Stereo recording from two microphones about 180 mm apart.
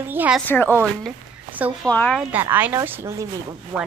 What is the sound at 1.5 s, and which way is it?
Speech, 10° right (ahead or behind).